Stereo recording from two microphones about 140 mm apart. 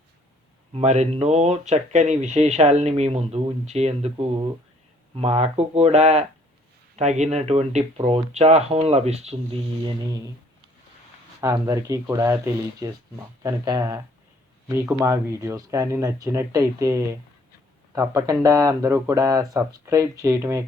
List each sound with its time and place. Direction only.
0.7 s speech: 55° right (ahead or behind)
11.3 s speech: 25° right (ahead or behind)